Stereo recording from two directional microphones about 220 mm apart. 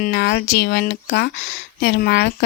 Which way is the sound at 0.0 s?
50° left (ahead or behind).